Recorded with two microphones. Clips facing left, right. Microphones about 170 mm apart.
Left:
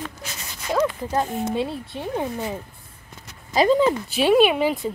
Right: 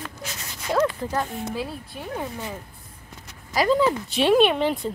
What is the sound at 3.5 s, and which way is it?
Speech, 20° left (ahead or behind).